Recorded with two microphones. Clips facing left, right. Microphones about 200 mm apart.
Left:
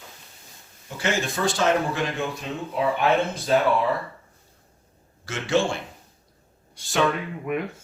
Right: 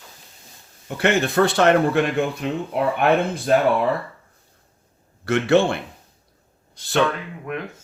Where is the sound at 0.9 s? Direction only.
60° right (ahead or behind).